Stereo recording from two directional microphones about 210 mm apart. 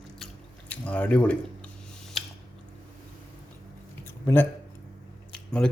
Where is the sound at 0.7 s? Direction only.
5° left (ahead or behind).